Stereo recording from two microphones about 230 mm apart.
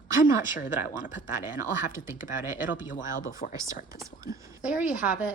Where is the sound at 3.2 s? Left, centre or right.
Left.